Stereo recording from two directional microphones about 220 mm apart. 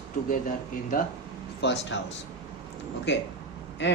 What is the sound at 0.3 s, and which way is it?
Speech, 35° left (ahead or behind).